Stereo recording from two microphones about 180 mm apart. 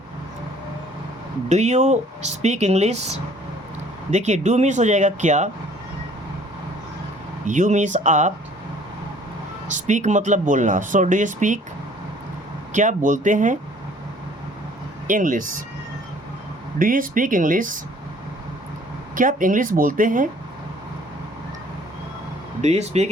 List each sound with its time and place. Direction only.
1.5 s speech: 40° right (ahead or behind)
7.4 s speech: 45° right (ahead or behind)
9.6 s speech: 40° right (ahead or behind)
12.7 s speech: 45° right (ahead or behind)
15.0 s speech: 45° right (ahead or behind)
16.7 s speech: 50° right (ahead or behind)
19.1 s speech: 50° right (ahead or behind)
22.6 s speech: 35° right (ahead or behind)